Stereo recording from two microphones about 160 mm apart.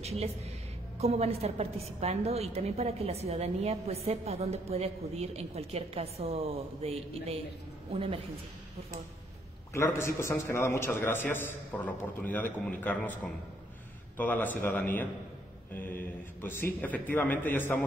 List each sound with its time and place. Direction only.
0.0 s a woman's voice: 40° right (ahead or behind)
9.8 s a man's voice: 15° left (ahead or behind)